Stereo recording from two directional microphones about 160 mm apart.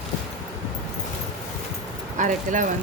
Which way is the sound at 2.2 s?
50° right (ahead or behind).